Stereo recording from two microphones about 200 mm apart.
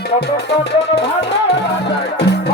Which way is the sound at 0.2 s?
55° left (ahead or behind).